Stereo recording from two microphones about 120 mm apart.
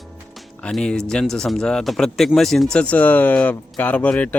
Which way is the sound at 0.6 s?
5° left (ahead or behind).